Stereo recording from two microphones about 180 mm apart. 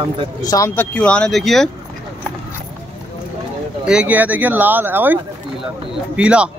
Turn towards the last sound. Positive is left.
turn(degrees=-5)  # may be behind; listen again after turning